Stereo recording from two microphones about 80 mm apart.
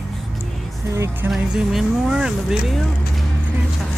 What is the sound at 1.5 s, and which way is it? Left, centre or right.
Speech, centre.